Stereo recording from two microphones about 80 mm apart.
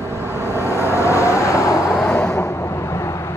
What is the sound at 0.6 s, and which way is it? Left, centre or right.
Vehicle, left.